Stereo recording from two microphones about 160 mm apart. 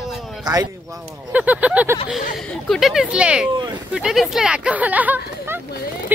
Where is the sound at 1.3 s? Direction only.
10° right (ahead or behind).